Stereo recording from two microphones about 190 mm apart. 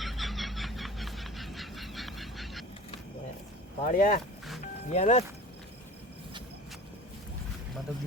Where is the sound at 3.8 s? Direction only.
45° left (ahead or behind).